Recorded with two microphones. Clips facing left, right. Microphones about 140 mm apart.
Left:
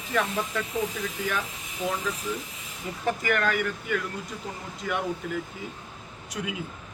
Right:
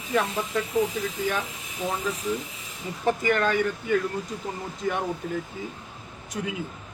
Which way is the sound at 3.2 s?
30° right (ahead or behind).